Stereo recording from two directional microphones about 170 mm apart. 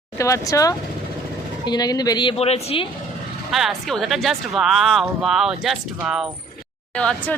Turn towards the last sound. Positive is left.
turn(degrees=5)  # may be behind; listen again after turning